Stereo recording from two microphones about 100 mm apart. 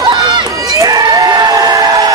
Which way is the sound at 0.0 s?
50° right (ahead or behind).